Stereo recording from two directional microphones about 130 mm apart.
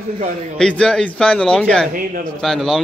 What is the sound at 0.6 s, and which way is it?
A man's voice, 5° left (ahead or behind).